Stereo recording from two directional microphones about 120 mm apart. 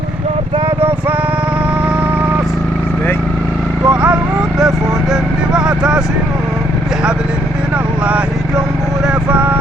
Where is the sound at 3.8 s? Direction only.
10° right (ahead or behind).